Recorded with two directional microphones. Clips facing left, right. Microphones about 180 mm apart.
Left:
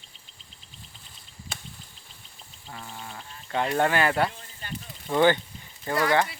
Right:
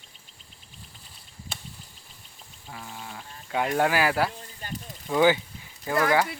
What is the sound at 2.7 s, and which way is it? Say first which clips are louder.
Speech: even; 5° right (ahead or behind).